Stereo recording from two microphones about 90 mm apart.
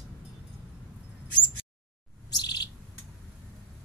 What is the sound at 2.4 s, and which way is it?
Bird, 50° left (ahead or behind).